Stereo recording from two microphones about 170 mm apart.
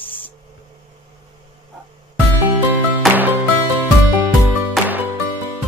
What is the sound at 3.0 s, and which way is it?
Music, centre (ahead or behind).